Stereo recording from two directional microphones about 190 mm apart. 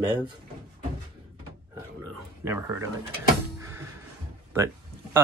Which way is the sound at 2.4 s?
15° right (ahead or behind).